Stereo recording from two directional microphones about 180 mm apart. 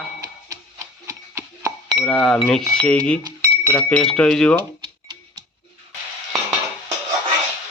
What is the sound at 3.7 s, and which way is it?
Speech, 5° left (ahead or behind).